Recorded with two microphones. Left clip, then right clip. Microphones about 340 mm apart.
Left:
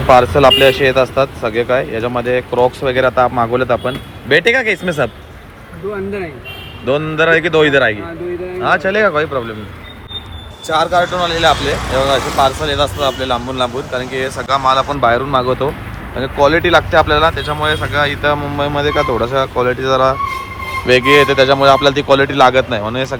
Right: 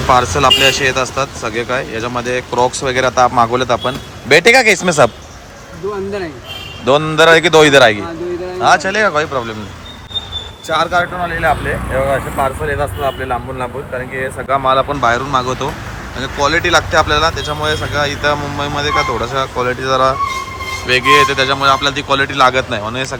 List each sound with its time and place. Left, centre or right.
0.1 s speech: centre
6.8 s speech: centre
10.7 s speech: centre
11.2 s speech: centre
14.4 s speech: centre
15.0 s speech: centre